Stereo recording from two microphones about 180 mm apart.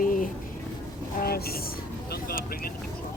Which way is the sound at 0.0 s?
50° left (ahead or behind).